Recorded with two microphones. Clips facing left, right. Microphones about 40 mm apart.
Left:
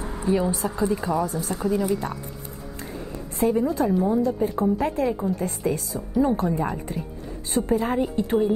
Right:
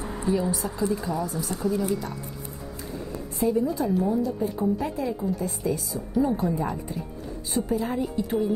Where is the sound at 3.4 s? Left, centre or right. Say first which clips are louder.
Left 3 dB; left.